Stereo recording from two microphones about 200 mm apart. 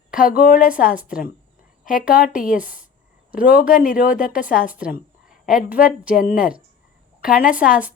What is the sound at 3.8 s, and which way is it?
Speech, 45° left (ahead or behind).